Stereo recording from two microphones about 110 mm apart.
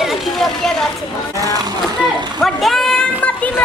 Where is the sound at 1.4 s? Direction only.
35° right (ahead or behind).